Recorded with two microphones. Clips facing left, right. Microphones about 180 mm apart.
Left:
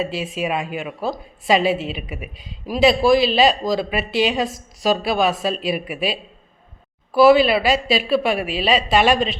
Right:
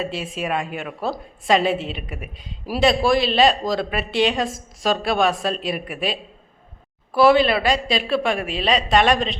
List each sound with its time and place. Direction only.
0.0 s speech: centre (ahead or behind)